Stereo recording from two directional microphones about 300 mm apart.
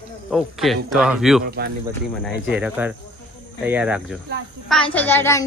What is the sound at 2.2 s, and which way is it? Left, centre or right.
A child's voice, centre.